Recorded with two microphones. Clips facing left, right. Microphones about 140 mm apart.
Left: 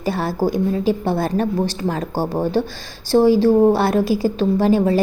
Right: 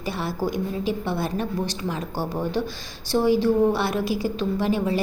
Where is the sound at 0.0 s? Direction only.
35° left (ahead or behind).